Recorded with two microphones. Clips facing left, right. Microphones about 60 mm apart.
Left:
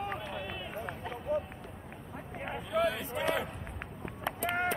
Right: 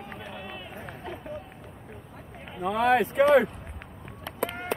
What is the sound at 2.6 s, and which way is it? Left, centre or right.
Speech, right.